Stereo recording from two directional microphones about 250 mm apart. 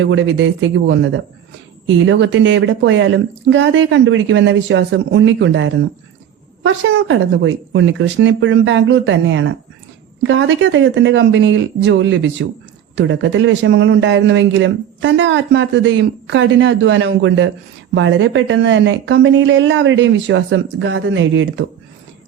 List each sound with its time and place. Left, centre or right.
0.0 s a man's voice: right